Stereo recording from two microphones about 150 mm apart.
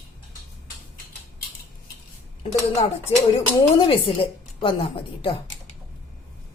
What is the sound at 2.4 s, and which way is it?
Speech, 40° left (ahead or behind).